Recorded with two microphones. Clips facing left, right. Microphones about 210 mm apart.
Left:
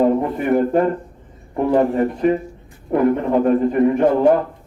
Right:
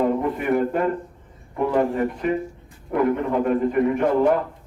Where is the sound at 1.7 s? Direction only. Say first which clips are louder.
Left 5 dB; 35° left (ahead or behind).